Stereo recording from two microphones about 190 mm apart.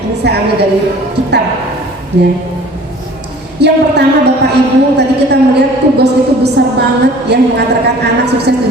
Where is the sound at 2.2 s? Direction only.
65° right (ahead or behind).